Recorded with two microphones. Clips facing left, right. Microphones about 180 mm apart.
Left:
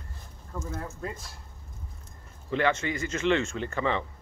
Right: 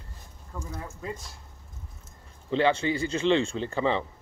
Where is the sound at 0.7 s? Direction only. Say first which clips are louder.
Left 1 dB; centre (ahead or behind).